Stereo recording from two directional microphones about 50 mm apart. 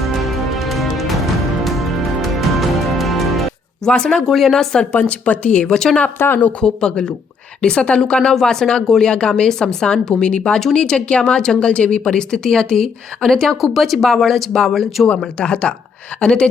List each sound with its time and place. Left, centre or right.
0.0 s music: centre
3.8 s speech: centre
4.3 s speech: centre
5.0 s speech: left; by 6.0 s centre
6.1 s speech: left
6.6 s speech: centre
15.4 s speech: centre